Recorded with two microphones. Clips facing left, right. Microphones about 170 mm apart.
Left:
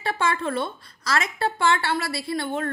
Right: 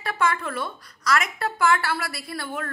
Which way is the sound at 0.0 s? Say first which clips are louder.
Even; 30° left (ahead or behind).